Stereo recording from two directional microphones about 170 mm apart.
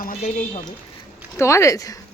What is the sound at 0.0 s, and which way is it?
Speech, 50° left (ahead or behind).